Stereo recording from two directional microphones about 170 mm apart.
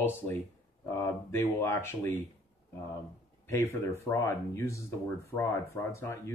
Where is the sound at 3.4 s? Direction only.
15° left (ahead or behind).